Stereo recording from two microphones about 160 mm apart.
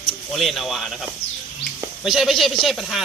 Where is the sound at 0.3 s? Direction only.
Centre (ahead or behind).